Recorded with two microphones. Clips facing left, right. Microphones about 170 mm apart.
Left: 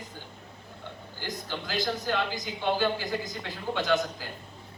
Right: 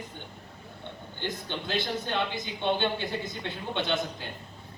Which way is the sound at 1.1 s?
25° right (ahead or behind).